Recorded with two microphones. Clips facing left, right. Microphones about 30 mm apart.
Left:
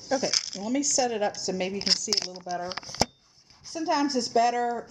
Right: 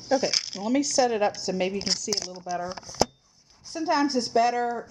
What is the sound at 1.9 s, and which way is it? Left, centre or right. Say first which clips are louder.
Speech: left 1 dB; left.